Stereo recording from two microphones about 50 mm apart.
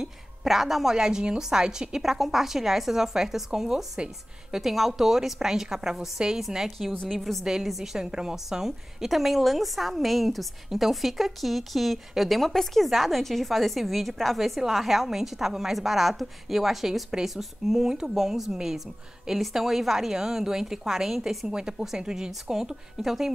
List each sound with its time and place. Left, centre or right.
0.0 s a woman's voice: centre